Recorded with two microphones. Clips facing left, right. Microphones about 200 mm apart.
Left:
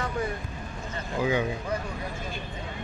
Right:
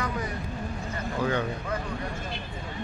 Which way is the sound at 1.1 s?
10° left (ahead or behind).